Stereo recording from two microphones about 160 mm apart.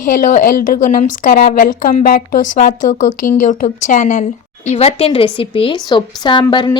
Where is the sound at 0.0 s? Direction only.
55° left (ahead or behind).